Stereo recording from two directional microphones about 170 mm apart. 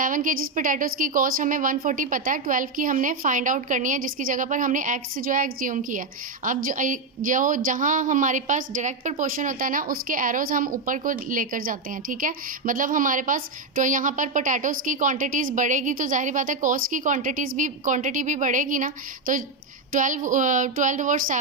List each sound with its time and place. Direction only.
0.0 s a woman's voice: 50° right (ahead or behind)